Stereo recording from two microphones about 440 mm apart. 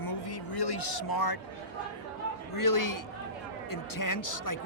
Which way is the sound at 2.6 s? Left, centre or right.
Left.